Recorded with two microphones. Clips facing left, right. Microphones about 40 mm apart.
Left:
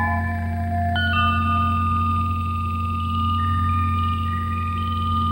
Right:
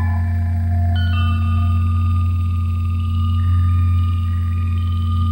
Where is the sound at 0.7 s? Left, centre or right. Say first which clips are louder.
Left 6 dB; left.